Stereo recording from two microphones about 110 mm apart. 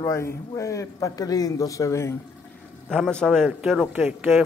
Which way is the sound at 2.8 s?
5° left (ahead or behind).